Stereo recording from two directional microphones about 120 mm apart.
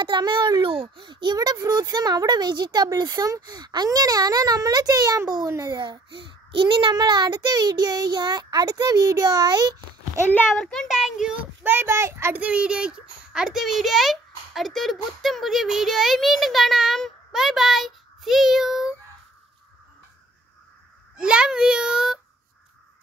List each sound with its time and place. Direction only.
0.0 s a child's voice: 40° right (ahead or behind)
10.5 s a child's voice: 5° left (ahead or behind)
11.6 s a child's voice: 20° right (ahead or behind)
21.2 s a child's voice: 5° right (ahead or behind)